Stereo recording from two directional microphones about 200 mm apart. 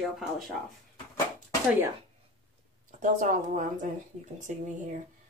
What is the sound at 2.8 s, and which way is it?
A woman's voice, 40° right (ahead or behind).